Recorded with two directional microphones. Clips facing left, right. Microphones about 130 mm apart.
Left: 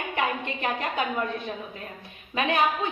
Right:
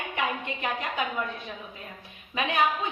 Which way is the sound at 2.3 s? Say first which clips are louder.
Left 3 dB; 35° left (ahead or behind).